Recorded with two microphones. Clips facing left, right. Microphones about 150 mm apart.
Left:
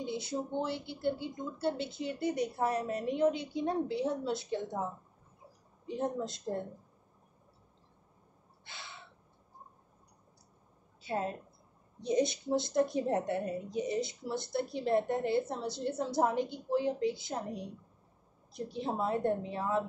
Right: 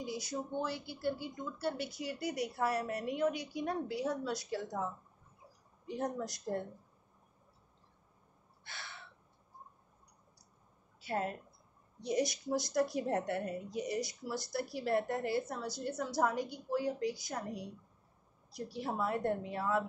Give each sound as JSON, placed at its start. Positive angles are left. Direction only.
{"t": 0.0, "sound": "a woman's voice", "side_deg": 25}
{"t": 8.6, "sound": "crow", "side_deg": 20}
{"t": 11.0, "sound": "a woman's voice", "side_deg": 25}
{"t": 18.6, "sound": "a woman's voice", "side_deg": 20}